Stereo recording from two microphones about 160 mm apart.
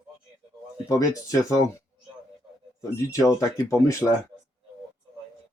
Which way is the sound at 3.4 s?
20° left (ahead or behind).